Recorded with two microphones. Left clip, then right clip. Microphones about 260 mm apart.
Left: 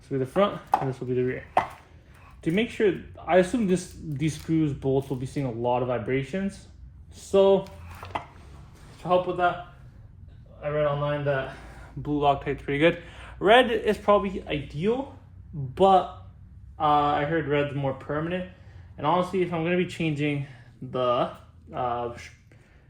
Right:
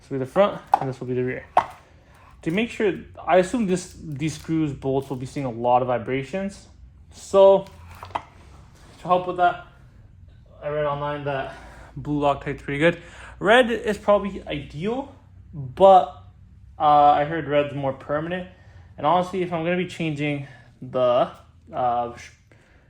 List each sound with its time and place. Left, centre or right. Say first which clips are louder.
0.1 s a man's voice: right 4 dB; right
7.6 s a sound: right 1 dB; centre
9.0 s a man's voice: right 3 dB; right
12.0 s a man's voice: right 1 dB; right